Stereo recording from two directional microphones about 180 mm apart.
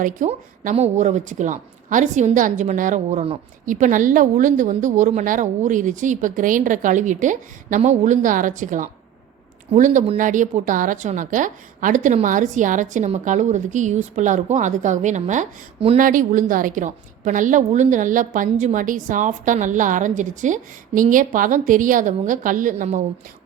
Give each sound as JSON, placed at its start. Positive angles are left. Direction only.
{"t": 0.0, "sound": "speech", "side_deg": -45}
{"t": 16.0, "sound": "speech", "side_deg": -50}